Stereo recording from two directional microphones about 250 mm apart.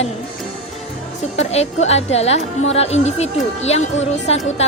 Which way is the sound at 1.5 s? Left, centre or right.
Left.